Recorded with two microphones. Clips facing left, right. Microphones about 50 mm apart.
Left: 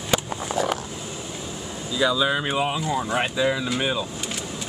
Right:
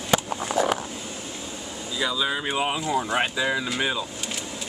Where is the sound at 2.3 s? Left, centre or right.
Centre.